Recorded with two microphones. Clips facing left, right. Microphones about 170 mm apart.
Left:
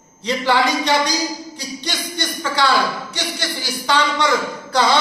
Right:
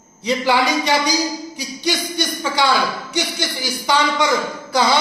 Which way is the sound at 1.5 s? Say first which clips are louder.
Right 5 dB; 10° right (ahead or behind).